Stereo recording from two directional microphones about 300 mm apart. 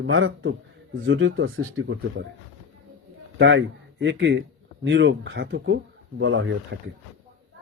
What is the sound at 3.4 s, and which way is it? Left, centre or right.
A man's voice, right.